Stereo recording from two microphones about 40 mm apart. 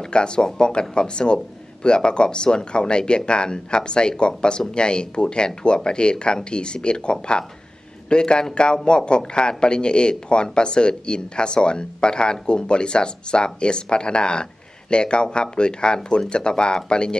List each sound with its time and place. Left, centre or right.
0.0 s a man's voice: left